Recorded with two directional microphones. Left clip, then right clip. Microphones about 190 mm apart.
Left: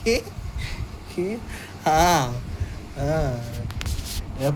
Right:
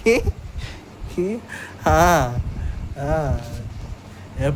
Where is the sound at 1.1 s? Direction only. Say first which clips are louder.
Right 3 dB; 45° right (ahead or behind).